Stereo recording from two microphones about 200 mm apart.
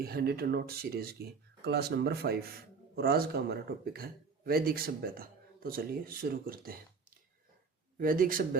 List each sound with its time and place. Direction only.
0.0 s speech: 50° right (ahead or behind)
7.9 s speech: 45° right (ahead or behind)